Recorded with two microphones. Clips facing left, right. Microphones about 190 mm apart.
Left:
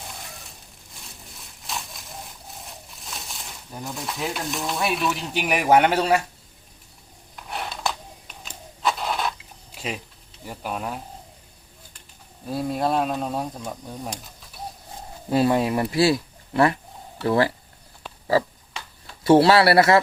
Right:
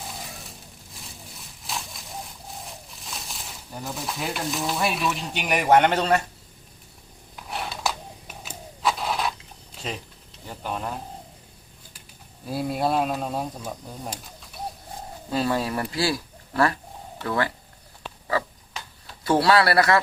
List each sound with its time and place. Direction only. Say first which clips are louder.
0.9 s a sound: right 1 dB; centre (ahead or behind)
7.3 s a sound: even; centre (ahead or behind)
9.7 s speech: left 2 dB; 10° left (ahead or behind)
12.5 s speech: left 1 dB; 5° right (ahead or behind)
15.3 s speech: left 5 dB; 25° left (ahead or behind)
19.2 s speech: left 5 dB; 25° left (ahead or behind)